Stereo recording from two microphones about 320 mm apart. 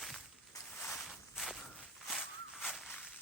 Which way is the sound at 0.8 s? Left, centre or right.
Centre.